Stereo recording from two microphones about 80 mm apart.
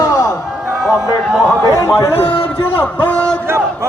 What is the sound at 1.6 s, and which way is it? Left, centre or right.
Speech, left.